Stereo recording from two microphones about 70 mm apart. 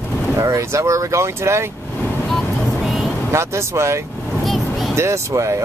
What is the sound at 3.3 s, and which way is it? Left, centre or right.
Speech, right.